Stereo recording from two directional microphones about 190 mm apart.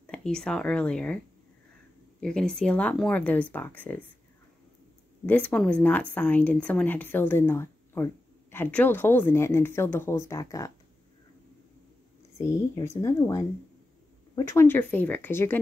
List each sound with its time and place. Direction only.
0.0 s a woman's voice: 5° left (ahead or behind)
5.2 s a woman's voice: 5° left (ahead or behind)
12.4 s a woman's voice: 15° left (ahead or behind)